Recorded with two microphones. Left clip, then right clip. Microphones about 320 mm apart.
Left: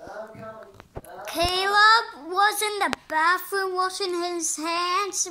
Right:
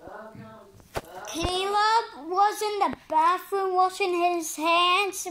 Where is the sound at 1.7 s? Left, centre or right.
Centre.